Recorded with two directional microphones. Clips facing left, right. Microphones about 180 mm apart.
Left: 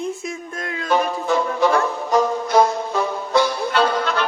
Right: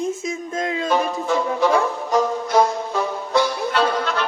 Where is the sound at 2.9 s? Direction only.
70° left (ahead or behind).